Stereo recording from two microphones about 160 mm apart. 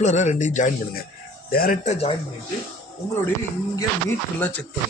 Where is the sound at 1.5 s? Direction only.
65° left (ahead or behind); by 2.1 s 40° left (ahead or behind).